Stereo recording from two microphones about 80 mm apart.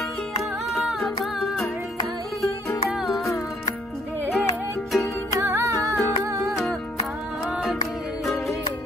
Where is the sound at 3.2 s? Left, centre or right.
Left.